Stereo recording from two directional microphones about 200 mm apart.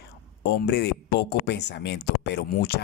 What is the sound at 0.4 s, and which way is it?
Speech, 55° left (ahead or behind).